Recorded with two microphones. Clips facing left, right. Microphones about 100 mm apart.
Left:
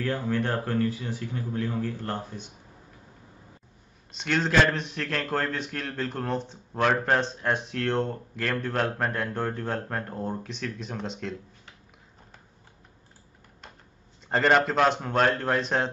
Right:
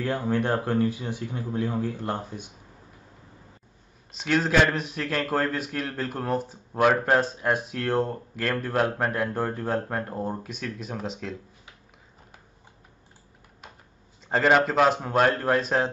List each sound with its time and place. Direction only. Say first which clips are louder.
0.0 s a man's voice: right 2 dB; 15° right (ahead or behind)
4.1 s a man's voice: right 2 dB; 5° right (ahead or behind)
14.3 s speech: right 1 dB; centre (ahead or behind)